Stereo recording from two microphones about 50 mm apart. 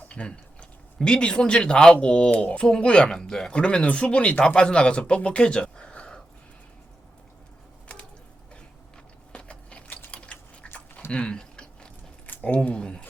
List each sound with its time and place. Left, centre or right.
0.1 s speech: left
9.3 s biting: left
10.1 s typing: left
11.1 s speech: left
11.3 s a sound: centre
12.6 s speech: left